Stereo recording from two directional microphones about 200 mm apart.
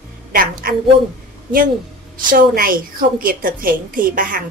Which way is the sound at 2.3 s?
45° right (ahead or behind).